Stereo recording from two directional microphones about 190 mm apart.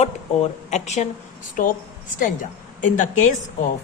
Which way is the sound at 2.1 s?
45° left (ahead or behind).